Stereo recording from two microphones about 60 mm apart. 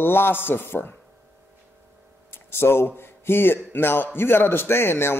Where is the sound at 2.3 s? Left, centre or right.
Left.